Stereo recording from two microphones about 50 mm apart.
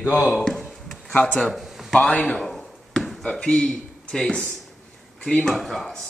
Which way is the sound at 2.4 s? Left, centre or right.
Centre.